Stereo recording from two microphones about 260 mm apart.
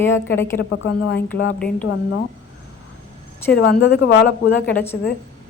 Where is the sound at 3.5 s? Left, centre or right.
Left.